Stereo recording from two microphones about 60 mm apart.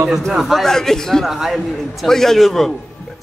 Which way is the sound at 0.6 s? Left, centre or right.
Centre.